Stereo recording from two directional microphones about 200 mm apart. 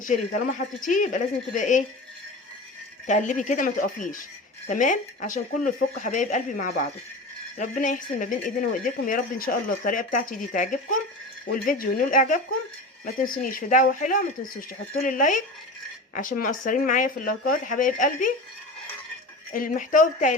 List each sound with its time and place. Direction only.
0.0 s speech: 40° left (ahead or behind)
3.1 s speech: 40° left (ahead or behind)
19.5 s speech: 45° left (ahead or behind)